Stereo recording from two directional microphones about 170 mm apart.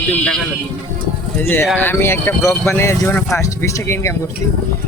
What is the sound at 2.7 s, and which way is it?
Speech, 15° left (ahead or behind).